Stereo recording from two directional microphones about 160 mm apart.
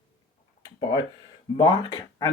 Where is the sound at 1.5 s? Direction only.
25° left (ahead or behind).